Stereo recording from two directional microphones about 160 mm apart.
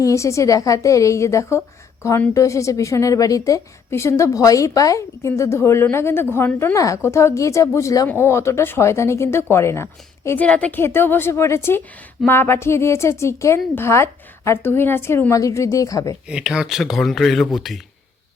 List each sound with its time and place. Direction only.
0.0 s a woman's voice: 20° left (ahead or behind)
16.3 s speech: 5° right (ahead or behind)